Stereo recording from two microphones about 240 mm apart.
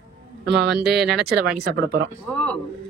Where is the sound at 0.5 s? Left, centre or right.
Right.